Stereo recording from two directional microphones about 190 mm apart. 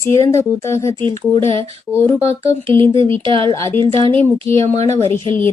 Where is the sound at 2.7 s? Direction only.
25° right (ahead or behind).